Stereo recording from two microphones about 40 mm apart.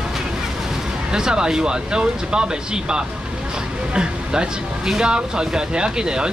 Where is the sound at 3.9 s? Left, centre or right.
Right.